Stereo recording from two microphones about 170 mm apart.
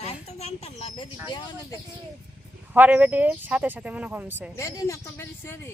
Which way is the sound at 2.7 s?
10° right (ahead or behind).